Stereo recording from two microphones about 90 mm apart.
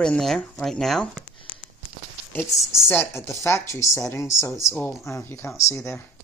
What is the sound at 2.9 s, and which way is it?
Speech, 20° left (ahead or behind).